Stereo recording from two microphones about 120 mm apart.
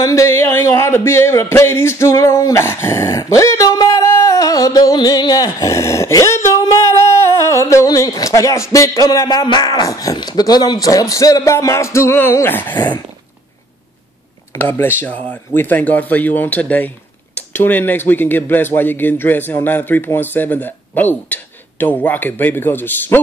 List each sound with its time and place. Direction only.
0.0 s speech: 25° left (ahead or behind)
5.5 s a sound: 25° left (ahead or behind)
8.7 s a man's voice: 30° left (ahead or behind)
14.5 s speech: 20° left (ahead or behind)